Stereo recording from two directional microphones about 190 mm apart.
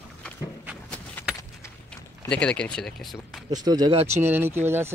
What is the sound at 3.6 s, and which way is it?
Speech, 20° right (ahead or behind).